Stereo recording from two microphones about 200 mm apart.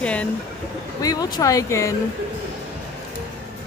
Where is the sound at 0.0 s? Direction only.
5° left (ahead or behind).